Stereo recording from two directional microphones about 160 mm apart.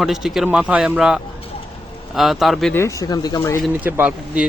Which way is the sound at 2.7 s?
15° left (ahead or behind).